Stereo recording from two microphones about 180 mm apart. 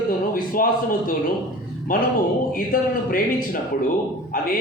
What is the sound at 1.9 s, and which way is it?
A man's voice, 50° left (ahead or behind).